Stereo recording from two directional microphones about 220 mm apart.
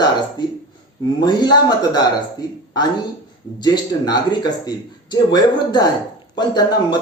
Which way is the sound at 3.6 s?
20° left (ahead or behind).